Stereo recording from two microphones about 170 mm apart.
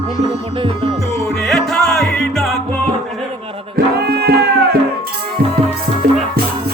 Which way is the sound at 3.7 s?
70° right (ahead or behind).